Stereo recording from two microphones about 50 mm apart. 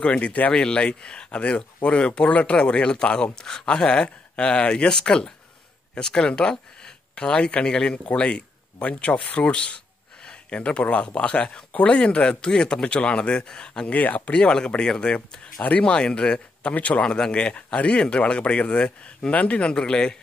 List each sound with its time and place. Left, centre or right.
0.0 s speech: left
13.8 s speech: left
17.0 s speech: centre